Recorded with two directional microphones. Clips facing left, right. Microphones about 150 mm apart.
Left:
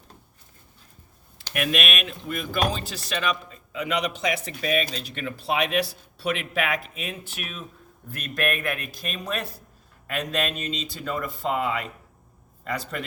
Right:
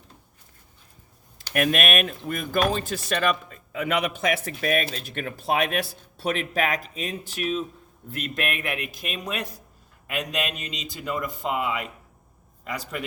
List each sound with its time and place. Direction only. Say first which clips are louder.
1.5 s speech: right 4 dB; 45° right (ahead or behind); by 13.1 s 10° right (ahead or behind)